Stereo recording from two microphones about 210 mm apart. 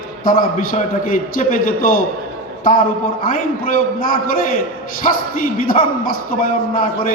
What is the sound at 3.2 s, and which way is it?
A man's voice, 40° left (ahead or behind).